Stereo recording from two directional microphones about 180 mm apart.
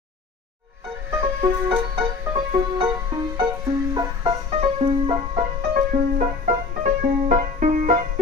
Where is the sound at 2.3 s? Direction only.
25° right (ahead or behind).